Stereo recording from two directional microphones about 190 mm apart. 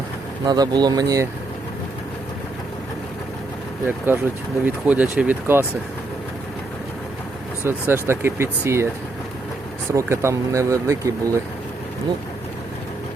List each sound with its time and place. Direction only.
0.4 s speech: 20° right (ahead or behind)
3.8 s speech: 10° right (ahead or behind)
7.6 s speech: 10° right (ahead or behind)
9.9 s speech: 15° right (ahead or behind)